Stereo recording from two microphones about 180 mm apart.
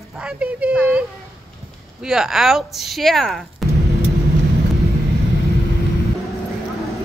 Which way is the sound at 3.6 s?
Centre (ahead or behind).